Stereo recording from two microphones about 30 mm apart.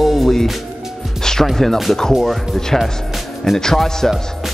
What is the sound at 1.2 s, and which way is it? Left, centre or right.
Music, centre.